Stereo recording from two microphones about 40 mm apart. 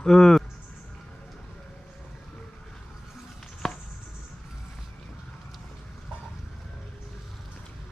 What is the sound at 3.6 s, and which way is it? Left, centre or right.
Chop, centre.